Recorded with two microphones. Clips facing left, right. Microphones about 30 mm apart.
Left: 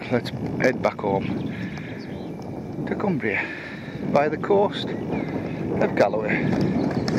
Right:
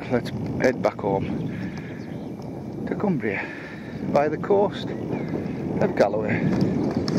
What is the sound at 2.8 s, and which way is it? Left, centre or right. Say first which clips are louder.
Speech: even; left.